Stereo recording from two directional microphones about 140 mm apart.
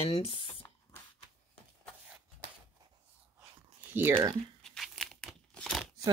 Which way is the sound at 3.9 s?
15° right (ahead or behind).